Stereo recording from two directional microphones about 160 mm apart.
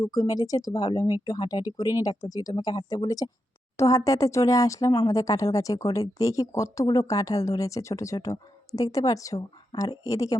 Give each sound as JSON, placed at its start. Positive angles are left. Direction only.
{"t": 0.0, "sound": "speech", "side_deg": 20}